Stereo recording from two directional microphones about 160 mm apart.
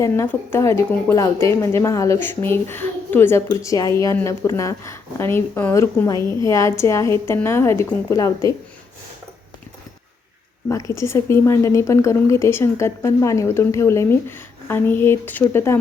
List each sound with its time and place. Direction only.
0.0 s a woman's voice: 15° left (ahead or behind)
10.7 s a woman's voice: 20° left (ahead or behind)